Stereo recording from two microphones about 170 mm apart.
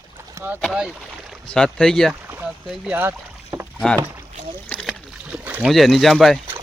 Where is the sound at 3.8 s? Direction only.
5° left (ahead or behind).